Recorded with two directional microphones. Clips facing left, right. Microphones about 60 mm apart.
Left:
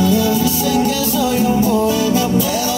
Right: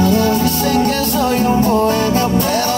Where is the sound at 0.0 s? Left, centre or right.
Right.